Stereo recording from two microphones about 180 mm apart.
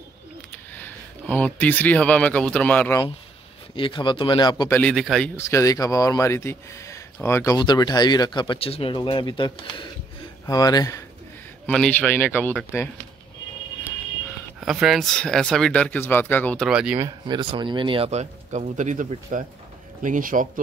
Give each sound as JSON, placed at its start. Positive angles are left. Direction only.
{"t": 0.7, "sound": "speech", "side_deg": 10}
{"t": 3.7, "sound": "speech", "side_deg": 25}
{"t": 4.7, "sound": "speech", "side_deg": 5}
{"t": 5.3, "sound": "speech", "side_deg": 15}
{"t": 11.6, "sound": "a man's voice", "side_deg": 5}
{"t": 14.6, "sound": "speech", "side_deg": -5}
{"t": 17.0, "sound": "speech", "side_deg": -25}